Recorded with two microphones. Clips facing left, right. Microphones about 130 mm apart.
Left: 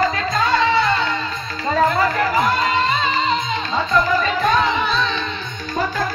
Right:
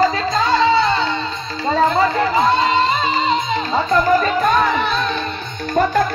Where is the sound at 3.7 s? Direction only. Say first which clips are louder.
Right 3 dB; 45° right (ahead or behind).